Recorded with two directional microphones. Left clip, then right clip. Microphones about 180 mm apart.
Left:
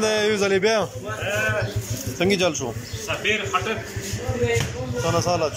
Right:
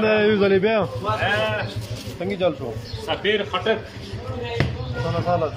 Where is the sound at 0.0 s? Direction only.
5° right (ahead or behind).